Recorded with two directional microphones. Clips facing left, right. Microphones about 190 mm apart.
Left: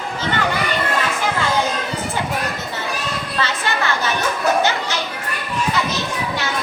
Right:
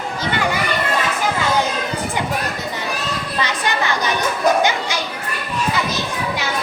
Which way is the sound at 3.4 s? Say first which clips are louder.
Right 1 dB; 15° right (ahead or behind).